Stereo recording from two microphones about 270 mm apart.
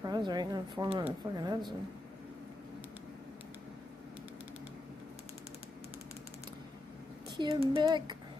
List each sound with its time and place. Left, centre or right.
0.0 s speech: centre
7.3 s speech: centre